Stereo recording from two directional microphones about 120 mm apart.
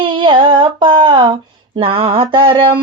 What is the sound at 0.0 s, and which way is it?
Female singing, 45° right (ahead or behind).